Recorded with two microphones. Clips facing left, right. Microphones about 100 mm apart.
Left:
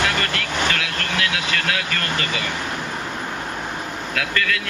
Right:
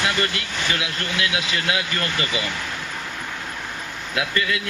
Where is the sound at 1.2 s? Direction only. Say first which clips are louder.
Right 1 dB; 20° right (ahead or behind).